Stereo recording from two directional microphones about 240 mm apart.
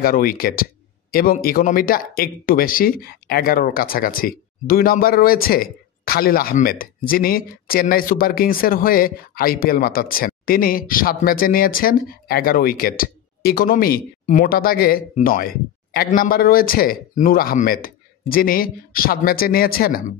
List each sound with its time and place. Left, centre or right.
0.0 s speech: left